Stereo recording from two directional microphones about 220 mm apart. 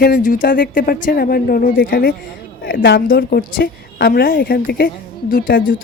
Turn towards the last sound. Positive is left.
turn(degrees=40)  # may be behind; listen again after turning